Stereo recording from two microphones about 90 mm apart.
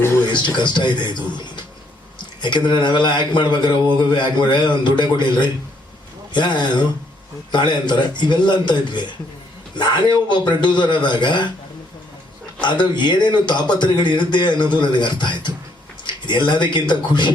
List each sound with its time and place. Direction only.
0.3 s a man's voice: 60° left (ahead or behind)
12.6 s a man's voice: 55° left (ahead or behind)